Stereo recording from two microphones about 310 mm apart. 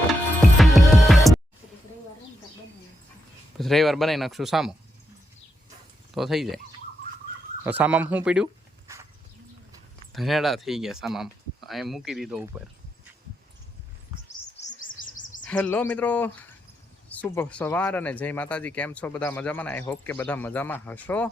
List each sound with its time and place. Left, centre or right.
0.1 s music: centre
3.6 s speech: centre
6.1 s speech: centre
7.6 s speech: centre
10.1 s speech: centre
14.5 s chirp: left
15.4 s speech: centre